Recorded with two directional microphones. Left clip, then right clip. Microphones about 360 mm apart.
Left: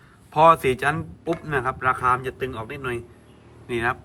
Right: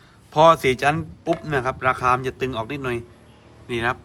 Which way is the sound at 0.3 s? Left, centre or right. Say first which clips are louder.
Right 1 dB; centre.